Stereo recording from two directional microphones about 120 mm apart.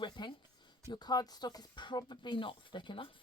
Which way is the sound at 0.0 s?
40° left (ahead or behind).